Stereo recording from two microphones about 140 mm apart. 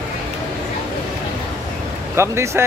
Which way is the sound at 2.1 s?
20° right (ahead or behind).